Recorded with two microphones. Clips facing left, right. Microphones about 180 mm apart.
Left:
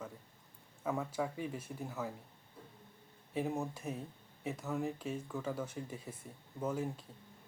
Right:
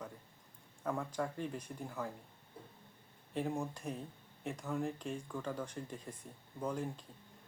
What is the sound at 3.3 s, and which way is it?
Speech, 5° left (ahead or behind).